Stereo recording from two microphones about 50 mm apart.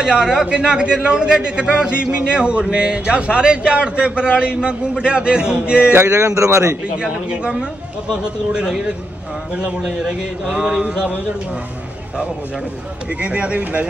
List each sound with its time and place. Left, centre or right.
0.0 s a man's voice: centre
5.9 s speech: right
7.0 s a man's voice: centre
13.2 s a man's voice: right